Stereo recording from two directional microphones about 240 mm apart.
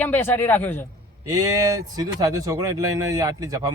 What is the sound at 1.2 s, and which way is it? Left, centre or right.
Speech, centre.